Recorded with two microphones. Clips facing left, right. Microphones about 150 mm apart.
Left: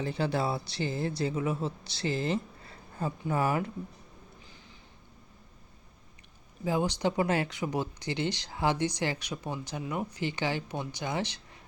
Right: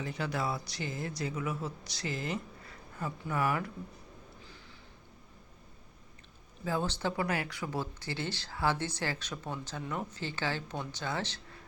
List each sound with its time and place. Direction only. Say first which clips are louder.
0.0 s speech: left 5 dB; 30° left (ahead or behind)
6.7 s speech: left 4 dB; 15° left (ahead or behind)